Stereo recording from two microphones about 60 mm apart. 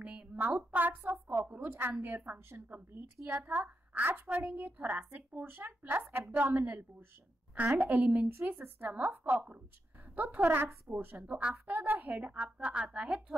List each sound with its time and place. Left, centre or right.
0.0 s a sound: centre
0.6 s a woman's voice: right
8.8 s a woman's voice: right
11.2 s a woman's voice: centre
11.5 s a woman's voice: right
12.1 s a woman's voice: right